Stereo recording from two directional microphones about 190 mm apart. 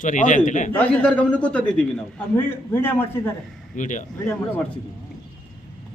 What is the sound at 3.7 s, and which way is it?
Speech, 40° left (ahead or behind).